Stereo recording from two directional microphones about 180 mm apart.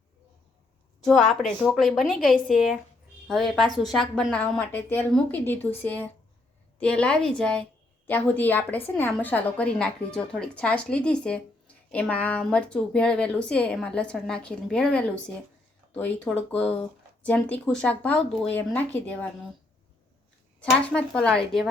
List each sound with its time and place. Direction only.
1.0 s a woman's voice: centre (ahead or behind)
20.6 s a woman's voice: 5° left (ahead or behind)